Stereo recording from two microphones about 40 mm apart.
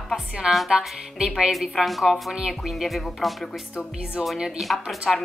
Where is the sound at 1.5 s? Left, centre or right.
Centre.